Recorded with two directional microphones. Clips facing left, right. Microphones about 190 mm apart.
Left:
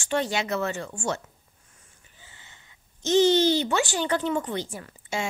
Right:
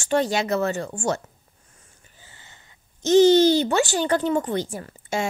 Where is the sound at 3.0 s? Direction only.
40° right (ahead or behind).